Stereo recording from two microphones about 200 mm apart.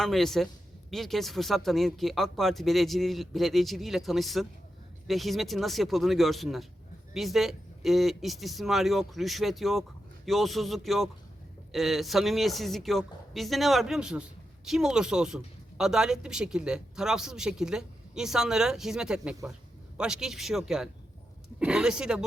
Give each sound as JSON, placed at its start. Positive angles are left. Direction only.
{"t": 0.0, "sound": "a man's voice", "side_deg": 0}